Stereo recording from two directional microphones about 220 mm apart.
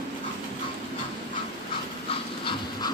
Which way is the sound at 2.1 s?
20° left (ahead or behind).